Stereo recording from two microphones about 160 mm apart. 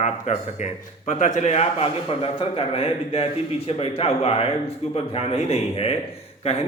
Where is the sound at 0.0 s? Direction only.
45° left (ahead or behind).